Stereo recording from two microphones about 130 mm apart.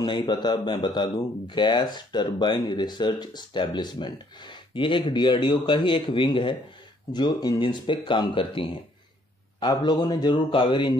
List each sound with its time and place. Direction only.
0.0 s a man's voice: 35° left (ahead or behind)